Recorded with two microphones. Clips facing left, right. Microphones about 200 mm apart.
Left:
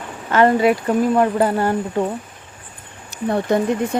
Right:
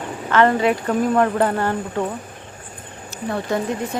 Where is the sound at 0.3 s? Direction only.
10° left (ahead or behind).